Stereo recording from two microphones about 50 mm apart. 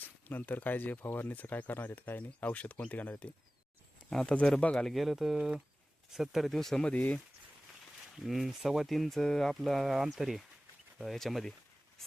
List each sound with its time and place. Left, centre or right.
0.0 s speech: left
4.1 s speech: centre
4.9 s speech: centre
6.8 s speech: left
7.7 s speech: centre